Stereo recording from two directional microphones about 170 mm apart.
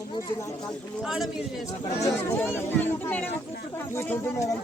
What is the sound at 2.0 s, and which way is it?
Speech, 15° left (ahead or behind).